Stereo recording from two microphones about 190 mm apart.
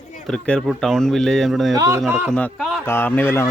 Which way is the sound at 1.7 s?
15° right (ahead or behind).